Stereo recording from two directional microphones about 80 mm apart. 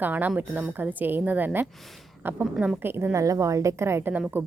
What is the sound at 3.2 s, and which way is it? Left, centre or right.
A woman's voice, right.